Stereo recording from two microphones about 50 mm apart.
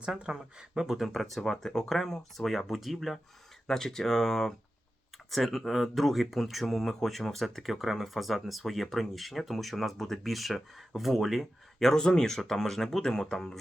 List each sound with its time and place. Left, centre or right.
0.0 s speech: centre
3.7 s speech: centre
11.8 s speech: centre